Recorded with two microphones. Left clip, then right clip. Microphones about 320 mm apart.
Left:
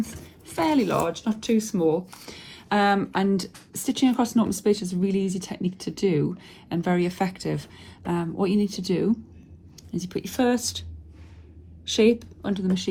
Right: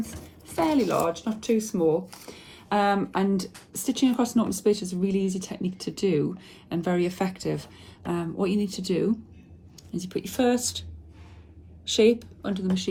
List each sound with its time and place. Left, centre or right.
0.4 s speech: left
11.9 s speech: centre